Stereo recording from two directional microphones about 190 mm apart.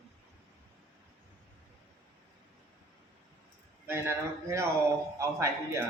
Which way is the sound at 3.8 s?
10° right (ahead or behind).